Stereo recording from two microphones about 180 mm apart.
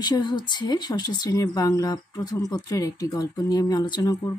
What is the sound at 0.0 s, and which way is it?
Speech, 25° left (ahead or behind).